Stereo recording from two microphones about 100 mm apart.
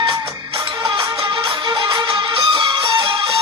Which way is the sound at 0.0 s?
55° right (ahead or behind).